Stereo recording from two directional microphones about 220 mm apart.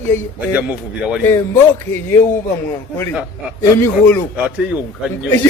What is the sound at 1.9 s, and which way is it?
Speech, 10° left (ahead or behind).